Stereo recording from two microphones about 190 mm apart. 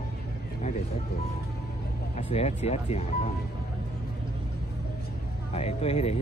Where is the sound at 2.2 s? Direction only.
35° left (ahead or behind).